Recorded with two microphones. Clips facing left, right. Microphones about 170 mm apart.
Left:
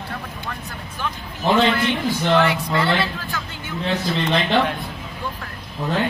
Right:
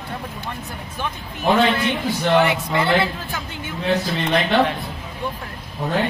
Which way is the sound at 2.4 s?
25° right (ahead or behind).